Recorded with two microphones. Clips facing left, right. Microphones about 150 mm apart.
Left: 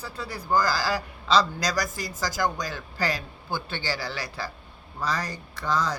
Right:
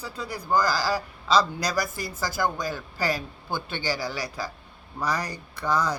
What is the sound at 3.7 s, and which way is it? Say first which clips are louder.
Speech: right 2 dB; 15° right (ahead or behind).